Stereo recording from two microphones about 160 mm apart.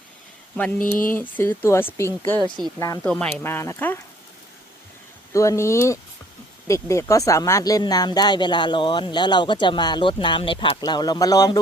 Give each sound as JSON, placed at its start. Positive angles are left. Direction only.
{"t": 1.1, "sound": "speech", "side_deg": 10}
{"t": 2.4, "sound": "speech", "side_deg": -25}
{"t": 2.7, "sound": "speech", "side_deg": 20}
{"t": 3.0, "sound": "speech", "side_deg": 5}
{"t": 5.3, "sound": "speech", "side_deg": 20}